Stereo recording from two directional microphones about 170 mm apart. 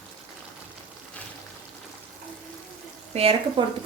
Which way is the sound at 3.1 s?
35° right (ahead or behind).